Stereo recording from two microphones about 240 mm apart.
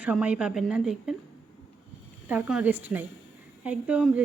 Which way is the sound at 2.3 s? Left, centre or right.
Centre.